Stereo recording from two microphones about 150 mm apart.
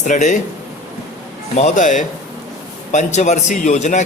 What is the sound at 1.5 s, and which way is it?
A man's voice, 55° left (ahead or behind).